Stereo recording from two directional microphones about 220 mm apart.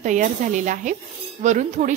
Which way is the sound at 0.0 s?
35° right (ahead or behind).